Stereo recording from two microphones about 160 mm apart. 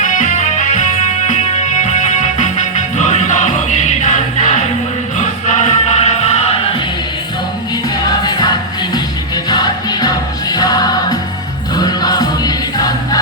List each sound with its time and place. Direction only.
0.0 s music: 50° left (ahead or behind)
7.9 s music: 25° left (ahead or behind)